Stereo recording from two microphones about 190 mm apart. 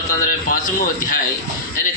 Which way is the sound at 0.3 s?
45° left (ahead or behind).